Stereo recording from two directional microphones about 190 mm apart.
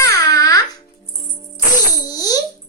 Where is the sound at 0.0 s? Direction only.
15° left (ahead or behind).